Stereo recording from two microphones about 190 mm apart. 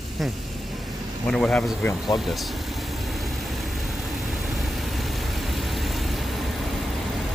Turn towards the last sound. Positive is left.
turn(degrees=0)  # may be behind; listen again after turning